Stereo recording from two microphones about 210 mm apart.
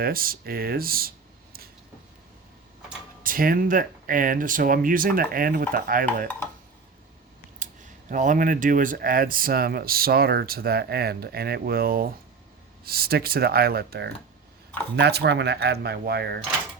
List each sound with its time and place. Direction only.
0.0 s speech: 45° right (ahead or behind)
3.2 s speech: 45° right (ahead or behind)
7.6 s a sound: 40° right (ahead or behind)
8.1 s speech: 40° right (ahead or behind)